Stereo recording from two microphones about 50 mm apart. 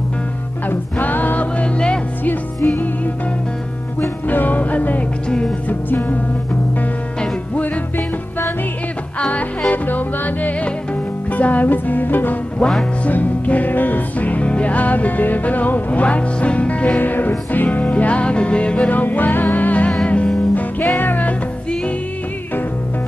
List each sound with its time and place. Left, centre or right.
0.7 s music: left
2.6 s music: left
4.3 s music: left
9.7 s music: left
17.0 s music: left
19.9 s music: left
20.5 s music: left